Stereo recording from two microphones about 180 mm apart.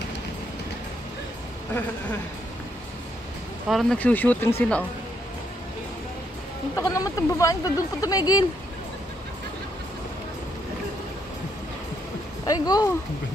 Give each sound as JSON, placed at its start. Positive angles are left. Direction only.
{"t": 3.6, "sound": "speech", "side_deg": 0}
{"t": 6.7, "sound": "speech", "side_deg": 20}
{"t": 12.4, "sound": "speech", "side_deg": 20}